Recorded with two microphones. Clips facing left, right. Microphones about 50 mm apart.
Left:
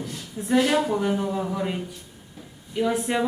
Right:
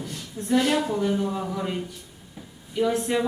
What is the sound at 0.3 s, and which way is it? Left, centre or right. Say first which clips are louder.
A man's voice: left 1 dB; centre.